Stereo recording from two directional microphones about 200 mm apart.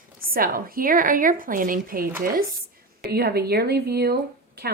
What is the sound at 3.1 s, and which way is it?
Speech, 50° right (ahead or behind).